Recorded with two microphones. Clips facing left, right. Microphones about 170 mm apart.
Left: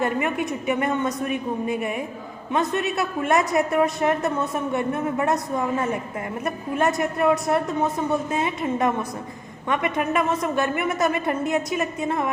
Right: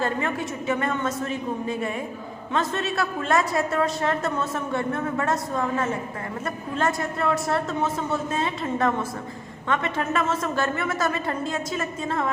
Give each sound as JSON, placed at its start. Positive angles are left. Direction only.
{"t": 0.0, "sound": "a woman's voice", "side_deg": 20}